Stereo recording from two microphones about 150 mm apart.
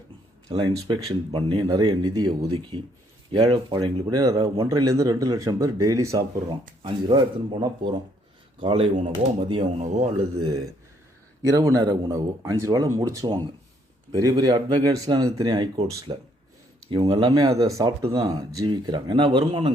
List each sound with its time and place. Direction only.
0.4 s speech: 30° right (ahead or behind)
6.8 s speech: 35° right (ahead or behind)
9.7 s speech: 50° right (ahead or behind)
11.4 s speech: 25° right (ahead or behind)
18.0 s speech: 35° right (ahead or behind)